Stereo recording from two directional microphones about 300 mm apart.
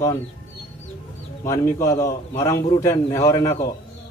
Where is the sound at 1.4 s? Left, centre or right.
Centre.